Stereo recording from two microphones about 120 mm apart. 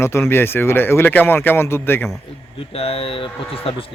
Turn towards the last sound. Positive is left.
turn(degrees=50)  # may be behind; listen again after turning